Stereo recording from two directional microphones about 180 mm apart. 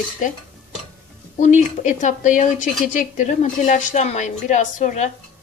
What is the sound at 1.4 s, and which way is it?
A woman's voice, 40° left (ahead or behind).